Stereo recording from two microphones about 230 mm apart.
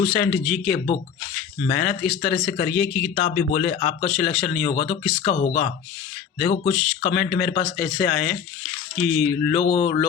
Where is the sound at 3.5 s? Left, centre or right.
Left.